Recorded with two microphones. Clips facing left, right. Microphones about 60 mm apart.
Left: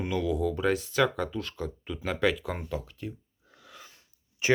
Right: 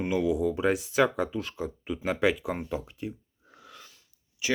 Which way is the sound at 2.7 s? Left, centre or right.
Centre.